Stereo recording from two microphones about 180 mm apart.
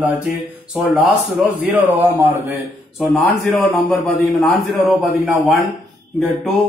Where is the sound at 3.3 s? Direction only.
10° left (ahead or behind).